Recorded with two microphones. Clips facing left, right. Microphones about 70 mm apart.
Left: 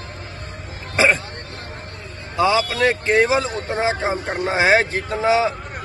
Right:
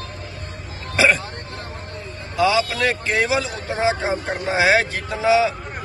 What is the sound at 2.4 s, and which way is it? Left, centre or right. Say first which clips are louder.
Speech: left 1 dB; left.